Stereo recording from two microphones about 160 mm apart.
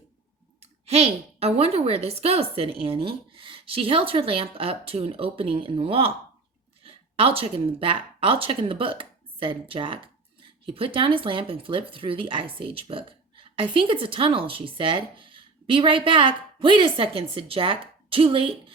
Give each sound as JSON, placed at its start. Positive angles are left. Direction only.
{"t": 0.6, "sound": "speech", "side_deg": -40}